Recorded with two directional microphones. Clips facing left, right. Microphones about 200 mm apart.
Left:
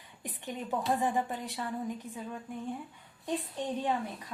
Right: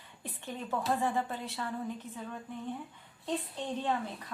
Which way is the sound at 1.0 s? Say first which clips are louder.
Left 1 dB; 15° left (ahead or behind).